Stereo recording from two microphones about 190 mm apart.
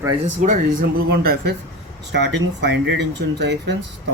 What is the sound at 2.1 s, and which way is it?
Speech, 65° right (ahead or behind).